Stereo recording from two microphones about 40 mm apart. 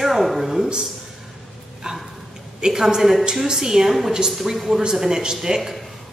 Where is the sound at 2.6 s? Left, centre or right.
Centre.